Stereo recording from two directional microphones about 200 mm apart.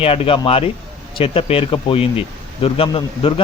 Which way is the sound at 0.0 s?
30° left (ahead or behind).